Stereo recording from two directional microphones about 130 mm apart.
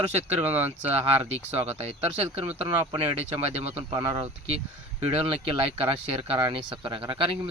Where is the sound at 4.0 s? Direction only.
35° right (ahead or behind).